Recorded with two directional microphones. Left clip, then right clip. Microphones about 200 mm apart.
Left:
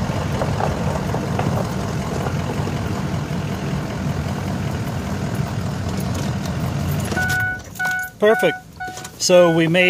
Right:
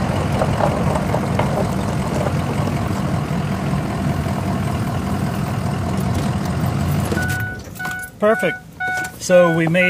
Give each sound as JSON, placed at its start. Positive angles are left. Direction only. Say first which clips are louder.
{"t": 8.2, "sound": "speech", "louder": "left 1 dB", "side_deg": 60}